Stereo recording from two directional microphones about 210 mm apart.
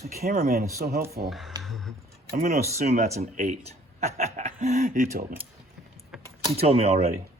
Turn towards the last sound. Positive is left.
turn(degrees=-30)  # may be behind; listen again after turning